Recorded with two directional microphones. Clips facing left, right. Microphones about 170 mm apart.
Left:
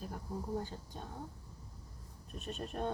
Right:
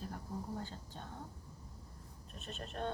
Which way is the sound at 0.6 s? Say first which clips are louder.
Left 3 dB; 10° left (ahead or behind).